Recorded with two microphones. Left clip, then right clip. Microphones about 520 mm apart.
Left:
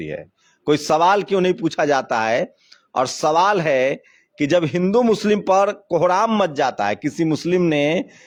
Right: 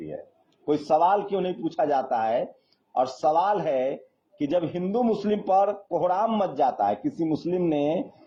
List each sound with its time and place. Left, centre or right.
0.6 s speech: left